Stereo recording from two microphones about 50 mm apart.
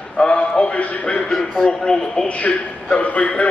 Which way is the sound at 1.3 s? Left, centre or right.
Centre.